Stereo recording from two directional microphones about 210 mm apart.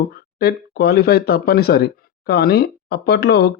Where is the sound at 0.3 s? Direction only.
50° left (ahead or behind).